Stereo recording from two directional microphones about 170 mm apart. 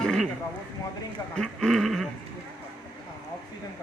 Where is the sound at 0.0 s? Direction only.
5° left (ahead or behind).